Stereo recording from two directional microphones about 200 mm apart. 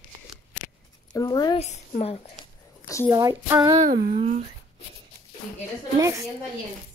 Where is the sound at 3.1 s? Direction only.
15° right (ahead or behind).